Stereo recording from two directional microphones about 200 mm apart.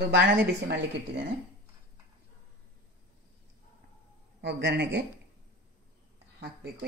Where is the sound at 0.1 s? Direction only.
60° right (ahead or behind).